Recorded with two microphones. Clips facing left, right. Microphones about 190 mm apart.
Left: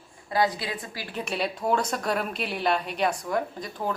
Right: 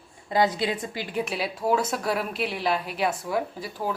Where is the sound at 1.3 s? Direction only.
Centre (ahead or behind).